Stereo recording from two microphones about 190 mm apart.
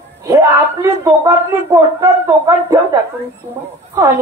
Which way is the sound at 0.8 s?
15° right (ahead or behind).